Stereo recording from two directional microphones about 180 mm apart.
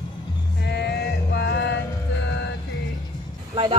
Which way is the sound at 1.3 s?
65° left (ahead or behind).